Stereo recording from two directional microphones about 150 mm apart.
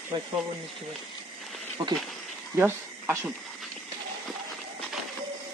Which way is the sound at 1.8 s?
30° right (ahead or behind).